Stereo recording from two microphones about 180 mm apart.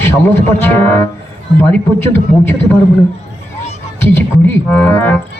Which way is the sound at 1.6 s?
10° left (ahead or behind).